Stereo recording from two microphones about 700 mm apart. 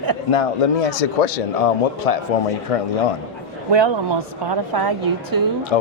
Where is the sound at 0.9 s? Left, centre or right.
Left.